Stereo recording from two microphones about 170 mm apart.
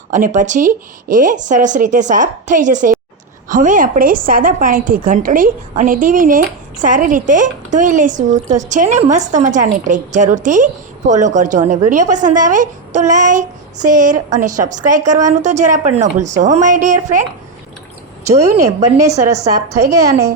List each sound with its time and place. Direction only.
0.1 s a woman's voice: 50° right (ahead or behind)
18.3 s a woman's voice: 20° right (ahead or behind)